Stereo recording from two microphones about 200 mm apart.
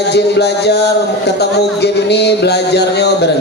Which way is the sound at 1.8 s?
55° left (ahead or behind).